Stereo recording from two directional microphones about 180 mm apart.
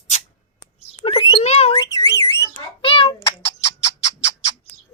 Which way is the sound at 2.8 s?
30° left (ahead or behind).